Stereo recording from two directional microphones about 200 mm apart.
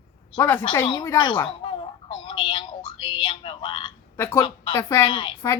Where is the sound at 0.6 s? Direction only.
20° left (ahead or behind).